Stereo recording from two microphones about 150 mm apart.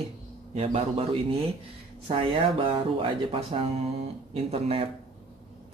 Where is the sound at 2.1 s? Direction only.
35° right (ahead or behind).